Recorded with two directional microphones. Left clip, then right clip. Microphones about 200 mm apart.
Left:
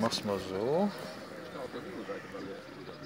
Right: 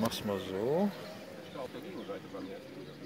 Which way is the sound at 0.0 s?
5° right (ahead or behind).